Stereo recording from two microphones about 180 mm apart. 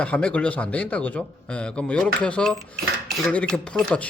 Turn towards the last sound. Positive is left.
turn(degrees=5)  # may be behind; listen again after turning